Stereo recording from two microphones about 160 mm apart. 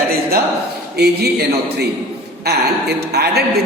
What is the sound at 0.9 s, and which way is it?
Speech, 90° right.